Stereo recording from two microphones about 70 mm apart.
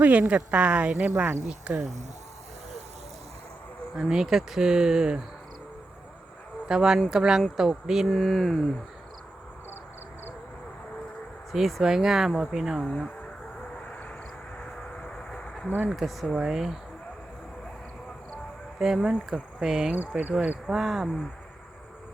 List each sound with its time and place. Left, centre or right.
0.0 s speech: right
3.9 s speech: centre
6.7 s speech: centre
8.0 s speech: centre
11.5 s speech: centre
12.8 s speech: centre
13.7 s vehicle: centre
15.9 s speech: centre
18.8 s speech: centre